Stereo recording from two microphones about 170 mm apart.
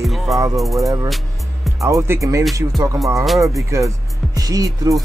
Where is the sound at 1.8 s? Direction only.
15° right (ahead or behind).